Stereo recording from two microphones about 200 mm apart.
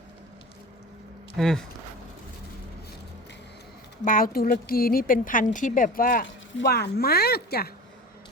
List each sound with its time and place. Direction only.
1.4 s speech: centre (ahead or behind)
4.0 s speech: 45° left (ahead or behind)
6.2 s speech: 60° left (ahead or behind)